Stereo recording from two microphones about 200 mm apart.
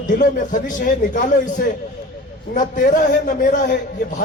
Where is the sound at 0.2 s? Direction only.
40° left (ahead or behind).